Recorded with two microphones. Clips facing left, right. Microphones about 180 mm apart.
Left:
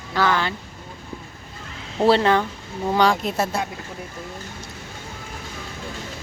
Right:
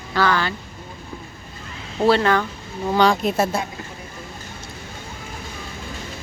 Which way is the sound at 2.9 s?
10° left (ahead or behind).